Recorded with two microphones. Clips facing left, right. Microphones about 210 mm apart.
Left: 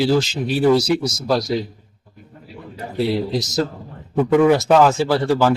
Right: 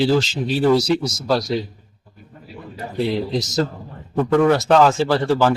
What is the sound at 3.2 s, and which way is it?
A man's voice, 5° left (ahead or behind).